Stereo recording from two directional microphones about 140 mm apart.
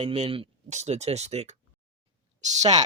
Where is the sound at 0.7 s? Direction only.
55° right (ahead or behind).